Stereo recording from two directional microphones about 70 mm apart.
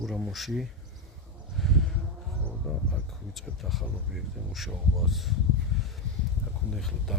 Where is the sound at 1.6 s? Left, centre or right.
Centre.